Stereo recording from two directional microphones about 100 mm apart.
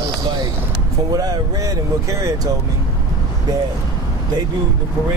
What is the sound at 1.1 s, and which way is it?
Speech, 40° right (ahead or behind).